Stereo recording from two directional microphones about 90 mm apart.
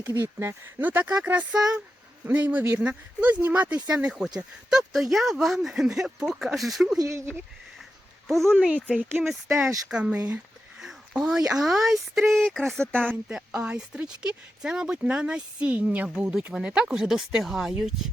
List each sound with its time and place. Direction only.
0.0 s speech: 25° right (ahead or behind); by 7.0 s centre (ahead or behind)
7.0 s speech: 35° right (ahead or behind)
8.3 s speech: 5° left (ahead or behind)
9.9 s a sound: 15° right (ahead or behind)
11.5 s speech: 5° right (ahead or behind)
13.2 s speech: 10° right (ahead or behind)